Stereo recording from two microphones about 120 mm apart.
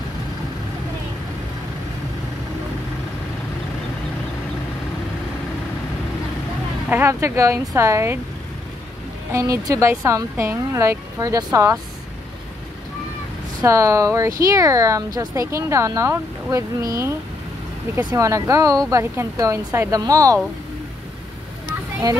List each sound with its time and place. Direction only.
6.9 s speech: 20° right (ahead or behind)
9.3 s speech: 25° right (ahead or behind)
13.7 s speech: 25° right (ahead or behind)